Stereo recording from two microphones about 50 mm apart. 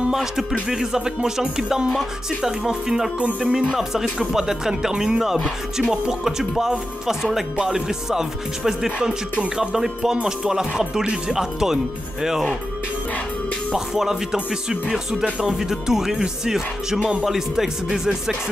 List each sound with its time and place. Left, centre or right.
0.1 s speech: centre
3.2 s speech: right
3.5 s speech: centre
13.7 s speech: centre